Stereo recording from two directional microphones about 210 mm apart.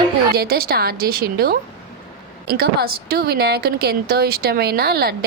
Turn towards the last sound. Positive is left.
turn(degrees=-50)  # may be behind; listen again after turning